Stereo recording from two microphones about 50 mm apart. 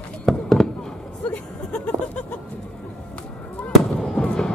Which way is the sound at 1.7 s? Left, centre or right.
Left.